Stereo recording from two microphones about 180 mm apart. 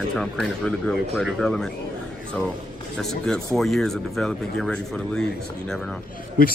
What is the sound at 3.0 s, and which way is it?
Speech, 5° left (ahead or behind).